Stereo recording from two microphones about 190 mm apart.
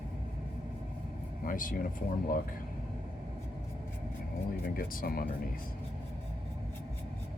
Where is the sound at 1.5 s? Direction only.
45° left (ahead or behind).